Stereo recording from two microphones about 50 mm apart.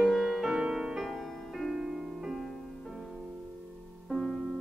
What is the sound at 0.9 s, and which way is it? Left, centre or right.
Music, centre.